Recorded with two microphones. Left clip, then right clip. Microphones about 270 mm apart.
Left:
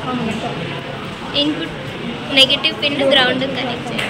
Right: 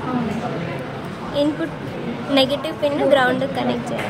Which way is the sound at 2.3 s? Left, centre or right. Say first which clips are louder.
Left 6 dB; right.